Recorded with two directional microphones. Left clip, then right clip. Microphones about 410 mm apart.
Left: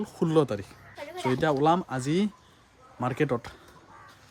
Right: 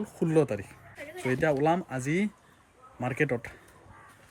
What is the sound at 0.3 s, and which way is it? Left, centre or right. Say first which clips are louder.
Speech: left 1 dB; centre.